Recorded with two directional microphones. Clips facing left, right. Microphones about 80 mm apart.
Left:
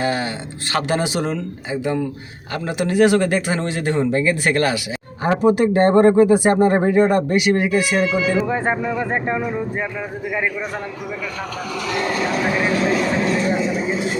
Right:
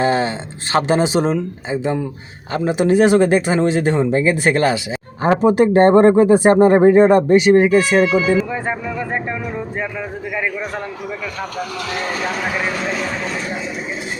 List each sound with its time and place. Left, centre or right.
0.0 s a sound: right
0.7 s speech: right
8.4 s speech: left